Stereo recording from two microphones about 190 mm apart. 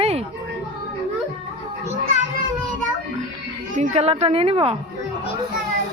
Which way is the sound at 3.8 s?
35° right (ahead or behind).